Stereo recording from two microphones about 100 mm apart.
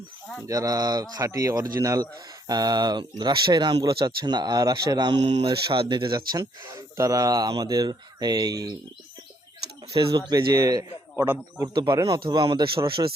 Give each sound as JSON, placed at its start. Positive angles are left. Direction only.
{"t": 0.4, "sound": "speech", "side_deg": -35}
{"t": 5.2, "sound": "speech", "side_deg": -75}
{"t": 5.6, "sound": "speech", "side_deg": -60}
{"t": 6.7, "sound": "speech", "side_deg": -30}
{"t": 10.0, "sound": "speech", "side_deg": -45}